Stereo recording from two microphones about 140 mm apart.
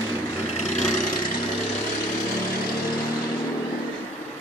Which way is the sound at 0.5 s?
55° left (ahead or behind).